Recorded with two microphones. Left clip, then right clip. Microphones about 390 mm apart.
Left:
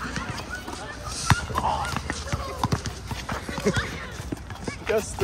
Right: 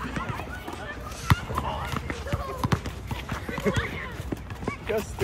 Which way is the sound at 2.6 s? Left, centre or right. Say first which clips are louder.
Left 2 dB; centre.